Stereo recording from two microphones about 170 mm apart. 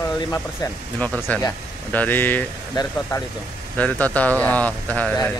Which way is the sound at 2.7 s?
25° left (ahead or behind).